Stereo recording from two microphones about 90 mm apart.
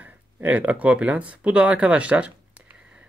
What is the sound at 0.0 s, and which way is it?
Speech, 15° right (ahead or behind).